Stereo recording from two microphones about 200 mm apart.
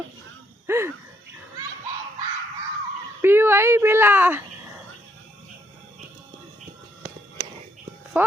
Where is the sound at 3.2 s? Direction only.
10° right (ahead or behind).